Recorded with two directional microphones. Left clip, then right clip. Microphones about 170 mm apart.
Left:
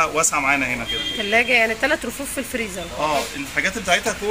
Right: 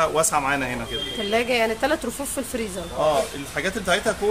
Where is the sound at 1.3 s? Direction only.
10° right (ahead or behind).